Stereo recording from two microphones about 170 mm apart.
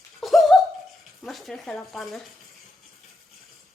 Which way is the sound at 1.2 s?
Centre (ahead or behind).